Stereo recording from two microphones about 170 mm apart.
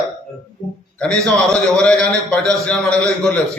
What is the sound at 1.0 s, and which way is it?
A man's voice, 5° left (ahead or behind).